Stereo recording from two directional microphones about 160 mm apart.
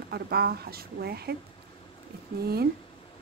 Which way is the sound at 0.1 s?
75° right (ahead or behind).